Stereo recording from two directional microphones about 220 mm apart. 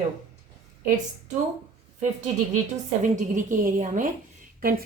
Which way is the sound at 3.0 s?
35° right (ahead or behind).